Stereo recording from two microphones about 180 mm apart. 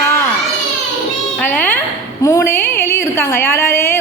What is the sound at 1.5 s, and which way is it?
A woman's voice, 10° left (ahead or behind).